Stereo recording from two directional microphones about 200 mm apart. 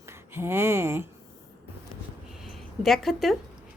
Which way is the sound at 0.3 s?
10° right (ahead or behind).